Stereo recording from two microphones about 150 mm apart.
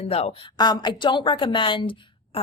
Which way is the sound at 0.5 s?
25° left (ahead or behind).